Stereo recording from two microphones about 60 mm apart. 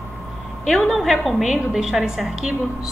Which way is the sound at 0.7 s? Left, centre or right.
Centre.